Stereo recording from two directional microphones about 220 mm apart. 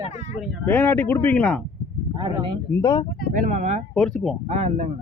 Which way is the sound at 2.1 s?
20° right (ahead or behind).